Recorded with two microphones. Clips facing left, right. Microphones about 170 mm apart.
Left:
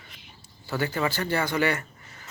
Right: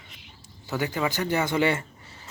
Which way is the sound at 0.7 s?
15° right (ahead or behind).